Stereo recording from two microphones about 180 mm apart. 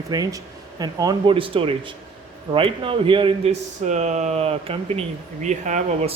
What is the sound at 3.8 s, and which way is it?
Speech, 40° right (ahead or behind).